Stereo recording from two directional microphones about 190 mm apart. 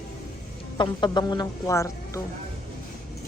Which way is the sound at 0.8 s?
20° left (ahead or behind).